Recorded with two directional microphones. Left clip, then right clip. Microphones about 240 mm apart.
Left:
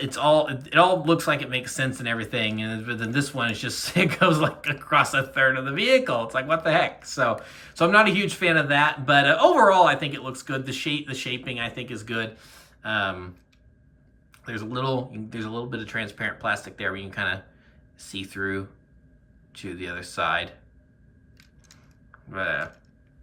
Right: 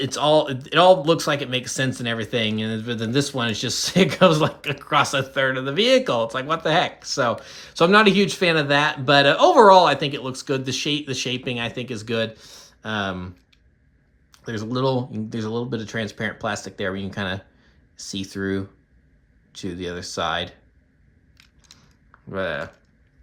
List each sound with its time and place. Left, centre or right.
0.0 s speech: centre
14.3 s speech: centre
22.3 s speech: centre